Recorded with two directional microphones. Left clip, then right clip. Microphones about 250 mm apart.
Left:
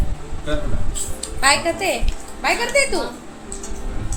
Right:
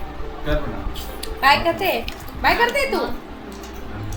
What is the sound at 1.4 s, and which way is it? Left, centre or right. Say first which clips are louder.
A woman's voice: right 1 dB; centre.